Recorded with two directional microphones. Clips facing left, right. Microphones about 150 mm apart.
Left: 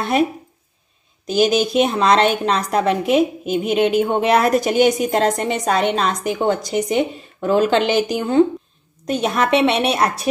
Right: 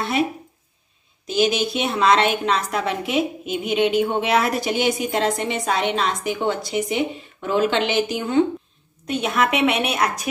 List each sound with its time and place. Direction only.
1.2 s a woman's voice: 40° left (ahead or behind)